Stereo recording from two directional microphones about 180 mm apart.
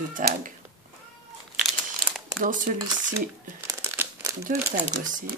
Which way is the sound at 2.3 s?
45° right (ahead or behind).